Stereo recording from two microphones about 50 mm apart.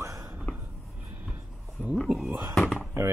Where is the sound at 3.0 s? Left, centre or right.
Right.